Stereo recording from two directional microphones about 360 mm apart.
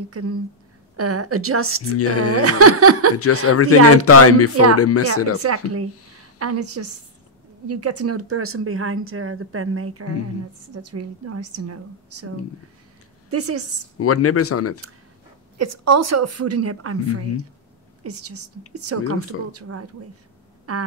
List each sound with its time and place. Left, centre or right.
0.1 s speech: right
2.0 s speech: left
2.3 s speech: right
3.4 s speech: left
5.4 s speech: right
13.9 s speech: left
15.5 s a woman's voice: right